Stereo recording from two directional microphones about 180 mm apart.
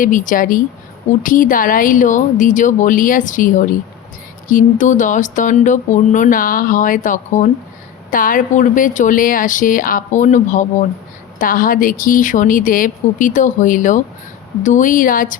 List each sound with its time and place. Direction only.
0.0 s speech: 45° left (ahead or behind)